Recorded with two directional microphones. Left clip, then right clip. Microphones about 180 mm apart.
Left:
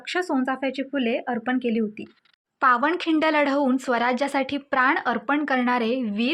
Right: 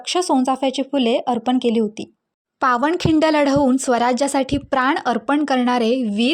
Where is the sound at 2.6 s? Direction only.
45° right (ahead or behind).